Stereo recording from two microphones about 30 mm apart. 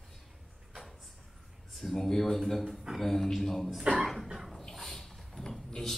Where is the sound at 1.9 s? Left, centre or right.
Centre.